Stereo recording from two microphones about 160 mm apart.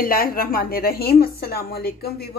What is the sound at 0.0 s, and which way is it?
A woman's voice, 65° left (ahead or behind).